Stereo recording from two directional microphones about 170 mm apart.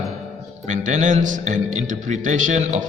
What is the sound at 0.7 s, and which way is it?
A man's voice, 45° right (ahead or behind).